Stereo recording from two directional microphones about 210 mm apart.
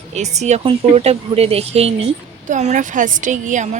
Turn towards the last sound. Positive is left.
turn(degrees=-35)  # may be behind; listen again after turning